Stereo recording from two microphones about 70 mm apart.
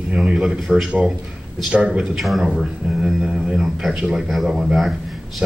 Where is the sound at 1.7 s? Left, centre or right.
Centre.